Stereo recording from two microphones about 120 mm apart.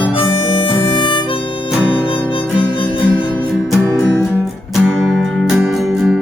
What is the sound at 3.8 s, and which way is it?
Music, 20° left (ahead or behind).